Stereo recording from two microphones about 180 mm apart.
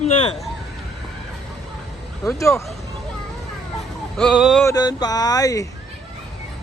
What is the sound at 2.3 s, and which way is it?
Speech, 15° left (ahead or behind).